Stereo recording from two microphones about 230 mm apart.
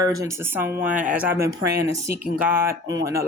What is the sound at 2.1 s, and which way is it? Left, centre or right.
A woman's voice, centre.